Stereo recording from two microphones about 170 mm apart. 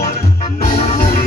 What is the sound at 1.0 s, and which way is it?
Music, 50° left (ahead or behind).